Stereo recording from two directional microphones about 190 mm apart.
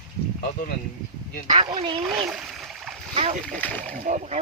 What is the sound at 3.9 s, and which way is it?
Speech, 40° right (ahead or behind).